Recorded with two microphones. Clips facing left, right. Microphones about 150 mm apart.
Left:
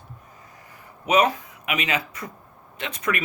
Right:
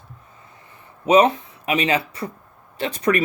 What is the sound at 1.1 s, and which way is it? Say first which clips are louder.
Speech: right 5 dB; 30° right (ahead or behind).